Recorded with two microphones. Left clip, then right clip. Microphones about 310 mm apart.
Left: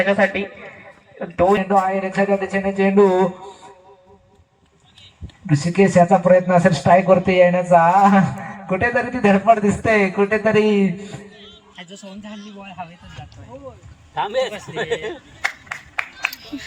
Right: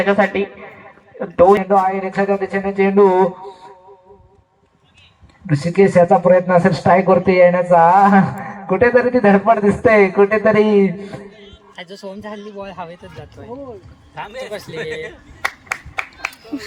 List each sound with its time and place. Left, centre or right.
0.0 s speech: centre
5.6 s speech: centre
15.4 s clapping: right